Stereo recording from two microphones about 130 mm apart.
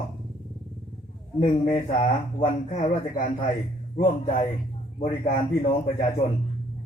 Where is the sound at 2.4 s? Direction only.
85° left.